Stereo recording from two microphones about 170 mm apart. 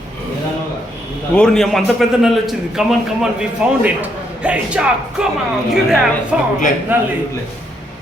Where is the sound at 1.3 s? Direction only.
5° left (ahead or behind).